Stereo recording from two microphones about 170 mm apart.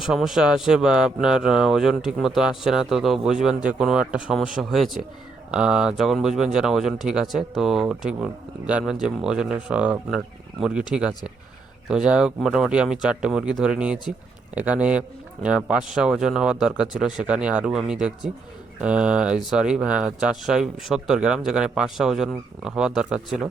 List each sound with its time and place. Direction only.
0.0 s speech: 5° right (ahead or behind)
11.9 s a man's voice: 5° right (ahead or behind)